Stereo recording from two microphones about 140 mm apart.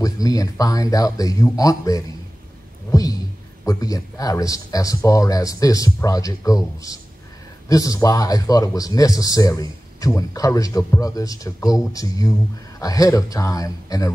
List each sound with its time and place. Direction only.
0.0 s speech: 25° left (ahead or behind)
2.9 s a sound: 25° left (ahead or behind)
3.6 s speech: 25° left (ahead or behind)